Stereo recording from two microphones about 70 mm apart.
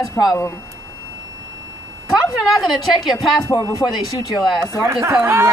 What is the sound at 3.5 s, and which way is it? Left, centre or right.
Speech, left.